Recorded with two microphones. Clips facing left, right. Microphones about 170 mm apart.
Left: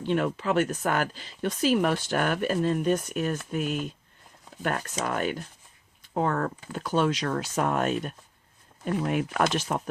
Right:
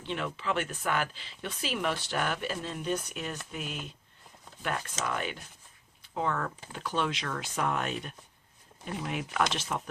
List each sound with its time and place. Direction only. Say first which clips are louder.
0.0 s speech: left 8 dB; 50° left (ahead or behind)